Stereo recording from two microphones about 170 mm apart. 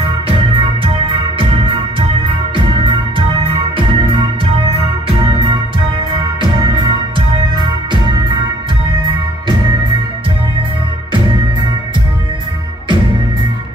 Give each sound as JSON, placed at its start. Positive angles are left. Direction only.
{"t": 0.3, "sound": "music", "side_deg": -30}
{"t": 2.5, "sound": "music", "side_deg": -30}
{"t": 6.7, "sound": "music", "side_deg": -25}